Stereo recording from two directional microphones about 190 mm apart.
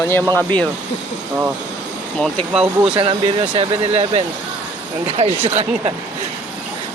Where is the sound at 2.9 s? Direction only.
30° right (ahead or behind).